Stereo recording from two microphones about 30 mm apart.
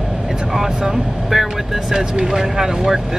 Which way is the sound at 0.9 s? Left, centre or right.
Centre.